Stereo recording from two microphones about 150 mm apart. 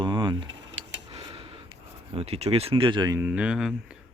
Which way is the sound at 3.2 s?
10° right (ahead or behind).